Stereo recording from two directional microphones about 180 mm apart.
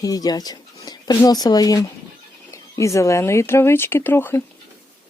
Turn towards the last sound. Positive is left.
turn(degrees=15)  # may be behind; listen again after turning